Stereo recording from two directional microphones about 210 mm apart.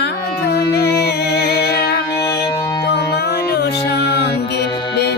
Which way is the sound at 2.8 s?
50° left (ahead or behind).